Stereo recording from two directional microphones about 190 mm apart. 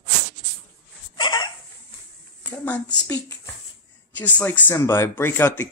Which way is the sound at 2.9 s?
15° left (ahead or behind).